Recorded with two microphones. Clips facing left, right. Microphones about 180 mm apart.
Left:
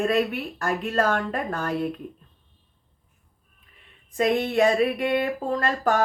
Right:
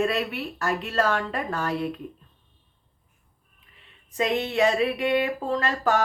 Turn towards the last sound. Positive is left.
turn(degrees=50)  # may be behind; listen again after turning